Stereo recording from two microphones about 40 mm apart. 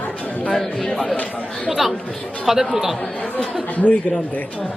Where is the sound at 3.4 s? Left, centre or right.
Left.